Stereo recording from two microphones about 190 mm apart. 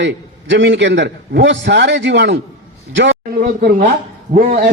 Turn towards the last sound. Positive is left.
turn(degrees=-45)  # may be behind; listen again after turning